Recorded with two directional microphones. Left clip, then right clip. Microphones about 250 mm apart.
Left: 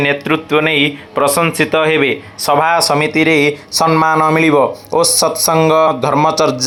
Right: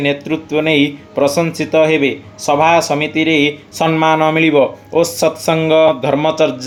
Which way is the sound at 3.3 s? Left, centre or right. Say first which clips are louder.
Left 1 dB; left.